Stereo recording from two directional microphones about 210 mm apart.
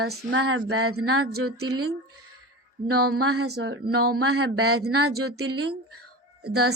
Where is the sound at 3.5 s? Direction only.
55° right (ahead or behind).